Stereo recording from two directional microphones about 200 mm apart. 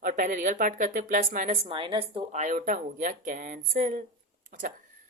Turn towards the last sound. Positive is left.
turn(degrees=-40)  # may be behind; listen again after turning